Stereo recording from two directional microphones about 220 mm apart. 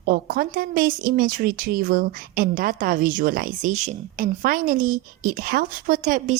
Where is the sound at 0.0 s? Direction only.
45° right (ahead or behind).